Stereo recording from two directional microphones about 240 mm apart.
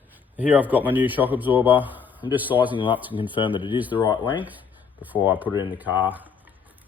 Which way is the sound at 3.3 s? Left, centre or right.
Centre.